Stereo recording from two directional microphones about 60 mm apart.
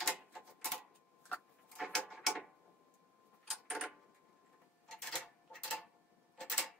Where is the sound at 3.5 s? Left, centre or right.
Centre.